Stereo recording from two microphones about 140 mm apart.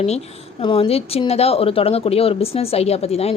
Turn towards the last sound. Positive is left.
turn(degrees=45)  # may be behind; listen again after turning